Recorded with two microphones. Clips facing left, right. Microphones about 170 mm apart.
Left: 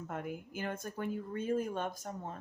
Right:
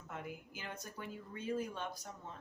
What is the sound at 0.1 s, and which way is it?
Speech, 50° left (ahead or behind).